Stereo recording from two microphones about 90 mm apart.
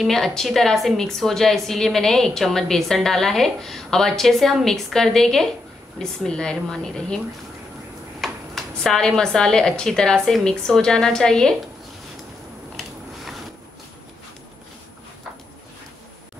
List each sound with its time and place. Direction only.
0.0 s a woman's voice: 5° left (ahead or behind)
8.2 s speech: 5° left (ahead or behind)
12.7 s biting: centre (ahead or behind)